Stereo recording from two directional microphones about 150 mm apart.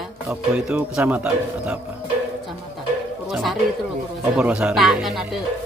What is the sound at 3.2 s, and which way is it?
Speech, centre (ahead or behind).